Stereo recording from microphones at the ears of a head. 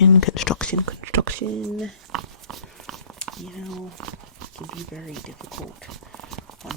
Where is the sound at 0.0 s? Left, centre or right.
Left.